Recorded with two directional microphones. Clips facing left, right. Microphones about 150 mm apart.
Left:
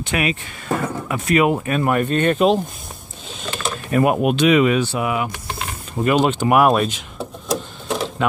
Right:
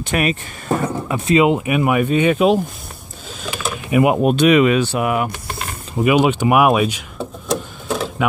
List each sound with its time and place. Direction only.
0.0 s speech: 45° right (ahead or behind)
0.8 s speech: 20° right (ahead or behind)
3.4 s a sound: 5° right (ahead or behind)
4.4 s speech: 65° right (ahead or behind)
5.0 s speech: 50° right (ahead or behind)
6.0 s a sound: 10° right (ahead or behind)